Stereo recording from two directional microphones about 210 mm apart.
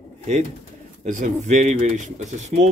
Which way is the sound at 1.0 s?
35° right (ahead or behind).